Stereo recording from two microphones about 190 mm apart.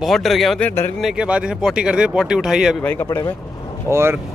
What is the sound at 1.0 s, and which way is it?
Speech, 5° right (ahead or behind).